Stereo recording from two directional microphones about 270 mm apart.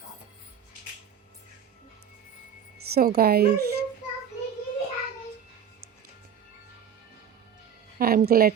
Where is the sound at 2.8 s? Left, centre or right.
Right.